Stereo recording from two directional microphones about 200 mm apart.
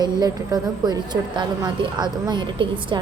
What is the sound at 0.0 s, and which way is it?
A woman's voice, 20° right (ahead or behind).